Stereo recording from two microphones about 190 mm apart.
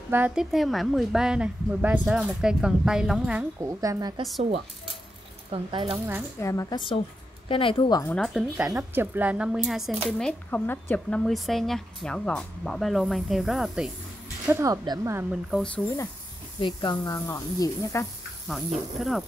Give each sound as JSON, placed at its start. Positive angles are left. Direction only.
{"t": 0.1, "sound": "speech", "side_deg": -5}
{"t": 3.6, "sound": "speech", "side_deg": -15}
{"t": 5.5, "sound": "speech", "side_deg": -25}
{"t": 6.4, "sound": "a woman's voice", "side_deg": 15}
{"t": 7.4, "sound": "speech", "side_deg": 30}
{"t": 8.0, "sound": "speech", "side_deg": 5}
{"t": 8.6, "sound": "speech", "side_deg": -15}
{"t": 14.5, "sound": "speech", "side_deg": -15}
{"t": 15.5, "sound": "speech", "side_deg": 5}
{"t": 16.5, "sound": "speech", "side_deg": 25}
{"t": 18.5, "sound": "speech", "side_deg": 0}